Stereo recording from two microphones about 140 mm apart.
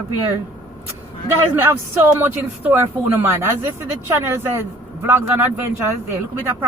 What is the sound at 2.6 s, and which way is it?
A woman's voice, 15° right (ahead or behind).